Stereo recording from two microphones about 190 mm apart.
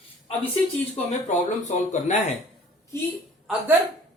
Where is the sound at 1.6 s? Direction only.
40° left (ahead or behind).